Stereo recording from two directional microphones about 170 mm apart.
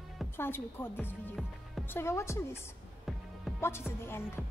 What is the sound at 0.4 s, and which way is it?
A woman's voice, 15° left (ahead or behind).